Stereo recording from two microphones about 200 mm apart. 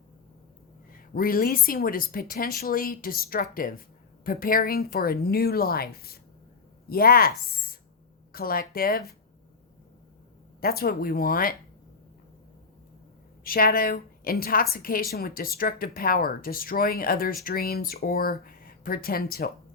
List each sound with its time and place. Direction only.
1.1 s a woman's voice: 45° left (ahead or behind)
10.6 s a woman's voice: 50° left (ahead or behind)
13.4 s a woman's voice: 45° left (ahead or behind)